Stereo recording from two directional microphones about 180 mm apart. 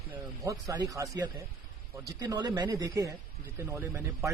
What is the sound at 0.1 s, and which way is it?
A man's voice, 20° right (ahead or behind).